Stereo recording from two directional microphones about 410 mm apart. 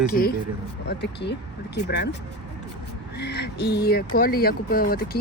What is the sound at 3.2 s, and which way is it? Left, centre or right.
Speech, left.